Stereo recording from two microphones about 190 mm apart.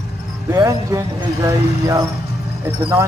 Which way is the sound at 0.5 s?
20° right (ahead or behind).